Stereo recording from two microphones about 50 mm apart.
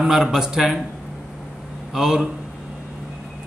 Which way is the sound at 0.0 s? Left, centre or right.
Centre.